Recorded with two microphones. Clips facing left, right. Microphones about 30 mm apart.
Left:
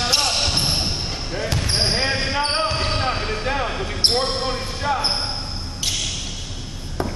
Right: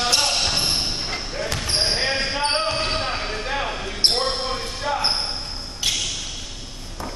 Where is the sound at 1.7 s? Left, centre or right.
Centre.